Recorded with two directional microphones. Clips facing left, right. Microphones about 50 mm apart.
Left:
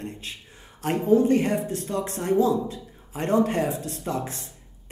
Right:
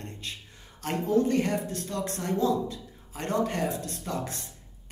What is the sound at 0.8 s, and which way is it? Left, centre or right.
Speech, centre.